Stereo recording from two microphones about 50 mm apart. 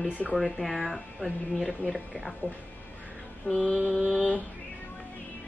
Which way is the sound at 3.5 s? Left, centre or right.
Left.